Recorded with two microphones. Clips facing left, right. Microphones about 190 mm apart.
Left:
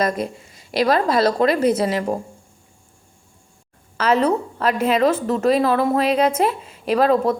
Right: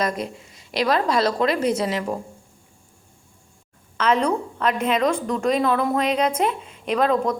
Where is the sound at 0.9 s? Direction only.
50° left (ahead or behind).